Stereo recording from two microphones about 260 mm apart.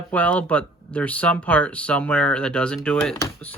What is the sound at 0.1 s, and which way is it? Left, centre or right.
Speech, centre.